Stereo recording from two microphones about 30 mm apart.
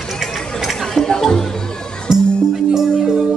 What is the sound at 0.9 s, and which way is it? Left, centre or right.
Music, centre.